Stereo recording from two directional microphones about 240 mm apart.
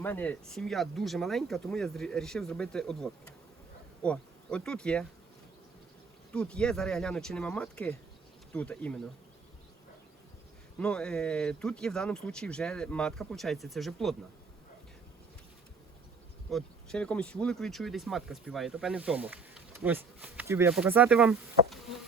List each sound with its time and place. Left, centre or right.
0.0 s speech: centre
4.0 s bee: centre
6.3 s speech: centre
10.8 s speech: centre
16.5 s speech: centre